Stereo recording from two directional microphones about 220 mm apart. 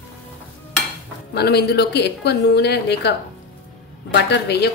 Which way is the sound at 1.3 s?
50° left (ahead or behind).